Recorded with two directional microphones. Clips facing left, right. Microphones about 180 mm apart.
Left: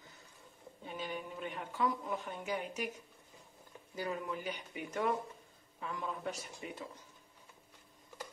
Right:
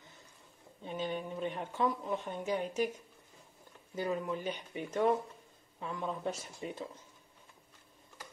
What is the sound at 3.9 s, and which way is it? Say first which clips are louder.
A woman's voice: right 4 dB; 25° right (ahead or behind).